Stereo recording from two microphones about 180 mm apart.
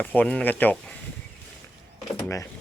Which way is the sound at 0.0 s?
10° left (ahead or behind).